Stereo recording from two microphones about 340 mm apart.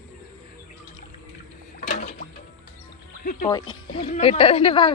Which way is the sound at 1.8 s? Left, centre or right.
Left.